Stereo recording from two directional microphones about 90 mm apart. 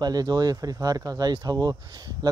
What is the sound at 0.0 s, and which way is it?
Speech, 50° right (ahead or behind).